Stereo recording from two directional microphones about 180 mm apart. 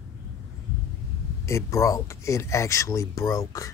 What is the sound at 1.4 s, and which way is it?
Speech, 15° left (ahead or behind).